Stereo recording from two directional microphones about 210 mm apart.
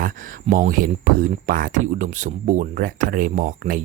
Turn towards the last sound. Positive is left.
turn(degrees=-40)  # may be behind; listen again after turning